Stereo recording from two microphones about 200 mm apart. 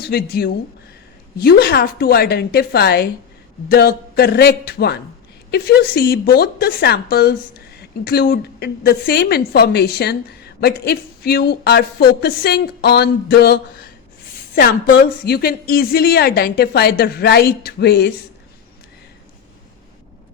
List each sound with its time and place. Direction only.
0.0 s speech: 50° left (ahead or behind)